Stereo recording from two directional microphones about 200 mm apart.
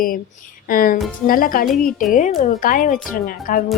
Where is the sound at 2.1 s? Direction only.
40° left (ahead or behind).